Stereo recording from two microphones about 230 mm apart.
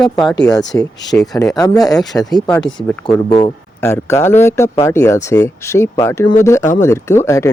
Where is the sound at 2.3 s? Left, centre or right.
Centre.